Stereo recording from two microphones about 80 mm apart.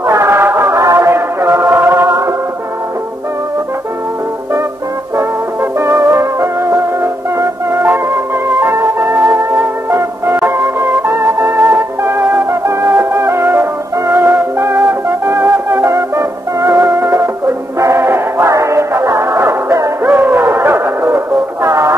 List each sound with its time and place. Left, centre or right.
0.0 s music: right
5.1 s music: right
20.0 s music: right
21.6 s music: right